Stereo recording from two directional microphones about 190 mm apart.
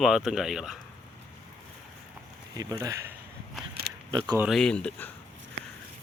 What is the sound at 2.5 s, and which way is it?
Speech, 20° right (ahead or behind).